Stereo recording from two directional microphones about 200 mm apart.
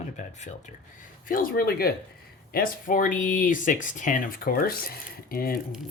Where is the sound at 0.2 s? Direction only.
35° left (ahead or behind).